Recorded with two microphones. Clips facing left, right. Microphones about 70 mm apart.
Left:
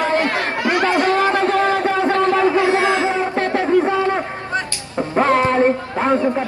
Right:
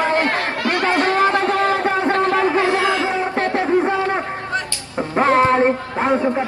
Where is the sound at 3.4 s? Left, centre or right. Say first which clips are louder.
Left 1 dB; right.